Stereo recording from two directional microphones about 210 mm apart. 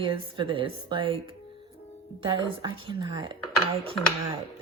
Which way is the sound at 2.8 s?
25° right (ahead or behind).